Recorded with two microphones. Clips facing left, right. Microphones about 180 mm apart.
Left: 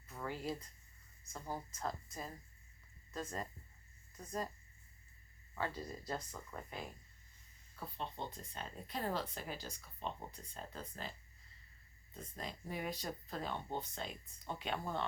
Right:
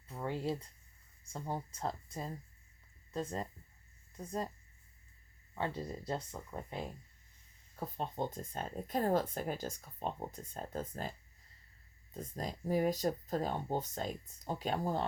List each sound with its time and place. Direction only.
0.1 s a sound: 25° right (ahead or behind)
1.3 s speech: 30° right (ahead or behind)
5.5 s speech: 25° right (ahead or behind)
7.8 s speech: 45° right (ahead or behind)
12.1 s speech: 40° right (ahead or behind)